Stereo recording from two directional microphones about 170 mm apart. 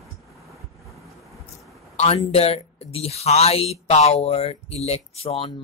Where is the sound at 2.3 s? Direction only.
35° left (ahead or behind).